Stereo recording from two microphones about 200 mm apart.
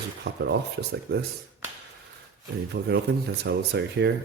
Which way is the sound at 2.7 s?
55° right (ahead or behind).